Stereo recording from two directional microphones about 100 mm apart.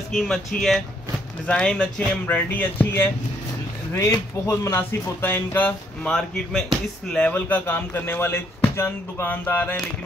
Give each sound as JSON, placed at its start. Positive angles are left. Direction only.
{"t": 0.1, "sound": "speech", "side_deg": 5}
{"t": 4.1, "sound": "speech", "side_deg": 30}
{"t": 6.0, "sound": "speech", "side_deg": 5}